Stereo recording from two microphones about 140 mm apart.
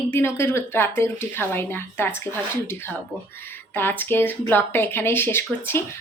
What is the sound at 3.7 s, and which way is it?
Speech, 15° left (ahead or behind).